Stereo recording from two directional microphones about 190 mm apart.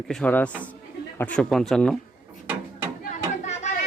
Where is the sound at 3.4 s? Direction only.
40° left (ahead or behind).